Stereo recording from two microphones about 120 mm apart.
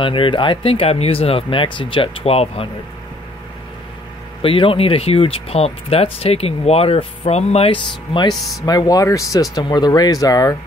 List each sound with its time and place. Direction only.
0.0 s speech: 45° left (ahead or behind)
4.4 s speech: 50° left (ahead or behind)
8.6 s speech: 30° left (ahead or behind)